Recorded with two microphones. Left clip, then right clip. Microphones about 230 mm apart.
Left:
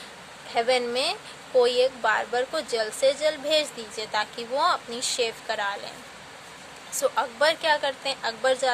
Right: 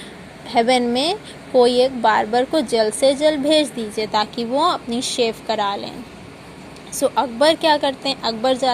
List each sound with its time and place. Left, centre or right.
0.5 s speech: centre
7.0 s speech: centre